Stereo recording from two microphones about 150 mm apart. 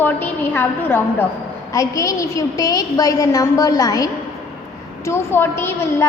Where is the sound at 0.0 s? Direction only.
15° left (ahead or behind).